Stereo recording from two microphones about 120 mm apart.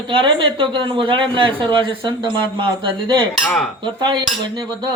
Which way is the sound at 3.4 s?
5° left (ahead or behind).